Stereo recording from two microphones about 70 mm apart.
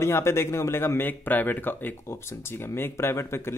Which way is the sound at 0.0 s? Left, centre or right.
Left.